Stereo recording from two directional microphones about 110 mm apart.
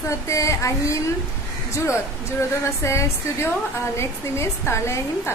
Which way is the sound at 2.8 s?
25° left (ahead or behind).